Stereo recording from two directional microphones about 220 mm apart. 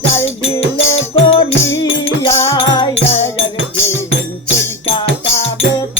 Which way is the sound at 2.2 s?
15° left (ahead or behind).